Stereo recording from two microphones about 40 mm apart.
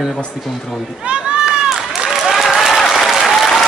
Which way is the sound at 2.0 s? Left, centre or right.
Centre.